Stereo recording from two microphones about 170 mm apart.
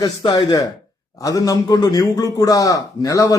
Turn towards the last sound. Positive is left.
turn(degrees=20)  # may be behind; listen again after turning